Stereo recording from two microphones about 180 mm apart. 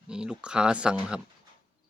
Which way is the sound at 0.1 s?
5° right (ahead or behind).